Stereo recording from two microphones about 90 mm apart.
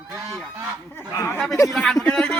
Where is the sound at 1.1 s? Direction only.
30° left (ahead or behind).